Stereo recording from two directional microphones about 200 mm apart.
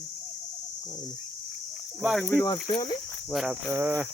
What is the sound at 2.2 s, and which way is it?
Speech, 15° left (ahead or behind).